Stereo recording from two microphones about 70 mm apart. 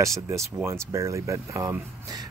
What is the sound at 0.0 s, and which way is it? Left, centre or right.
Speech, right.